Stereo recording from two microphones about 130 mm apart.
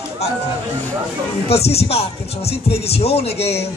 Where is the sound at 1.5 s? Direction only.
50° left (ahead or behind).